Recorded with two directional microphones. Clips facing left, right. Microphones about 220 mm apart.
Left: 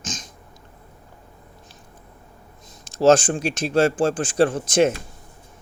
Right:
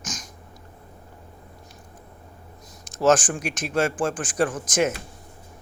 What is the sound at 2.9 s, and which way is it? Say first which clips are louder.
Speech: left 4 dB; 30° left (ahead or behind).